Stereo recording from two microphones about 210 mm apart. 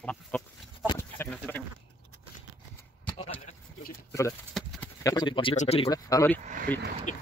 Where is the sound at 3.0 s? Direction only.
30° left (ahead or behind).